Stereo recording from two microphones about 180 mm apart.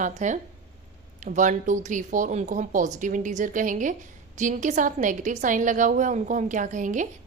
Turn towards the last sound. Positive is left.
turn(degrees=-45)  # may be behind; listen again after turning